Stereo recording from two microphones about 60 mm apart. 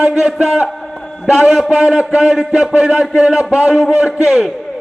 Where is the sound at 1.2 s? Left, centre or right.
Centre.